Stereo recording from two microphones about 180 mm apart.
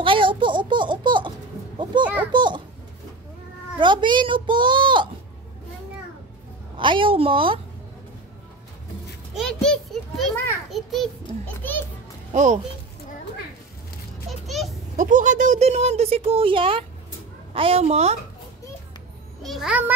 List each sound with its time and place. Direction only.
0.0 s a sound: 30° right (ahead or behind)
1.9 s speech: 25° right (ahead or behind)
2.3 s a sound: 25° right (ahead or behind)
3.8 s speech: 25° right (ahead or behind)
6.8 s speech: 25° right (ahead or behind)
9.3 s a sound: centre (ahead or behind)
12.3 s speech: 40° right (ahead or behind)
14.4 s music: centre (ahead or behind)
15.0 s speech: 45° right (ahead or behind)
19.4 s a child's voice: centre (ahead or behind)